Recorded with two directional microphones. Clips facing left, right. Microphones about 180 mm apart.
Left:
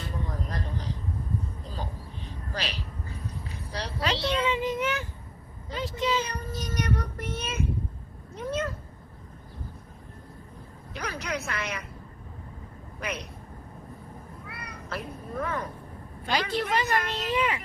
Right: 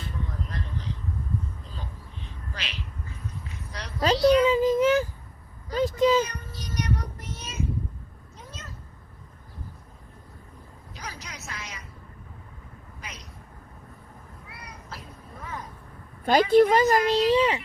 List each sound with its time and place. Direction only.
0.3 s a sound: 40° left (ahead or behind)
4.2 s a child's voice: 25° left (ahead or behind)
4.4 s child singing: 35° right (ahead or behind)
6.0 s speech: 45° right (ahead or behind)
6.2 s child singing: 35° left (ahead or behind); by 7.7 s 60° left (ahead or behind)
8.4 s cat: 60° left (ahead or behind)
10.9 s a sound: 60° left (ahead or behind)
13.0 s vehicle: 60° left (ahead or behind)
14.4 s cat: 60° left (ahead or behind)
16.2 s a woman's voice: 50° right (ahead or behind); by 17.6 s 30° right (ahead or behind)